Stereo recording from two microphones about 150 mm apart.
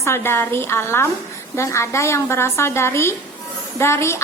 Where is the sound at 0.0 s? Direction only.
15° left (ahead or behind).